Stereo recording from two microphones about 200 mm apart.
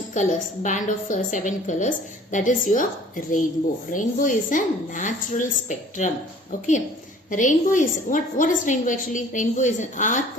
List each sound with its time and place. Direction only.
0.1 s a woman's voice: 40° left (ahead or behind)
7.3 s a woman's voice: 40° left (ahead or behind)